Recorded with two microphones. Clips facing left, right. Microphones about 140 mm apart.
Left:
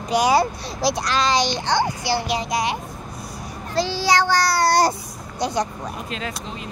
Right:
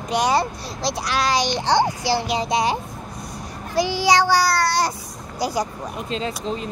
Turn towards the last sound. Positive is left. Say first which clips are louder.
# right 5 dB
turn(degrees=-35)  # may be behind; listen again after turning